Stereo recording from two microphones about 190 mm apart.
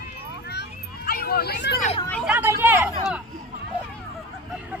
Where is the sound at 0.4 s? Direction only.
60° left (ahead or behind).